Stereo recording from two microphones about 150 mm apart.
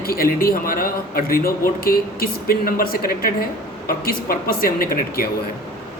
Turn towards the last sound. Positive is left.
turn(degrees=80)